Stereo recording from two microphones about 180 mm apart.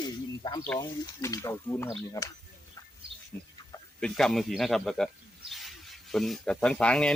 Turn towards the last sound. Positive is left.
turn(degrees=5)  # may be behind; listen again after turning